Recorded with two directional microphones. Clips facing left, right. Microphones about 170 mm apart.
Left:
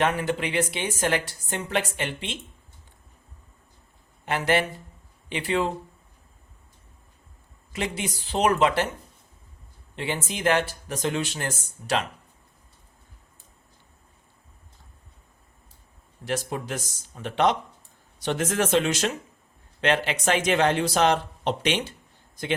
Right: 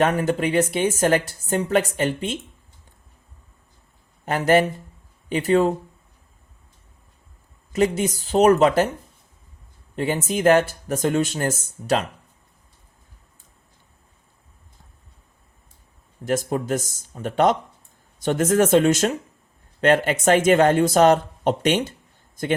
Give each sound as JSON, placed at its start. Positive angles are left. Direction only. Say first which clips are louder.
{"t": 0.0, "sound": "speech", "louder": "right 5 dB", "side_deg": -45}
{"t": 4.3, "sound": "speech", "louder": "right 6 dB", "side_deg": -45}
{"t": 7.7, "sound": "speech", "louder": "right 10 dB", "side_deg": -45}
{"t": 9.9, "sound": "speech", "louder": "right 7 dB", "side_deg": -45}
{"t": 16.2, "sound": "speech", "louder": "right 6 dB", "side_deg": -45}